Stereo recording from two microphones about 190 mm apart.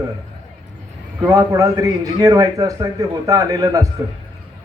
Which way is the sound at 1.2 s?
15° right (ahead or behind).